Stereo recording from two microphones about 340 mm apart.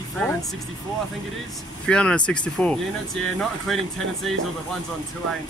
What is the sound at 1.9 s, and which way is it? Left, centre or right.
Speech, centre.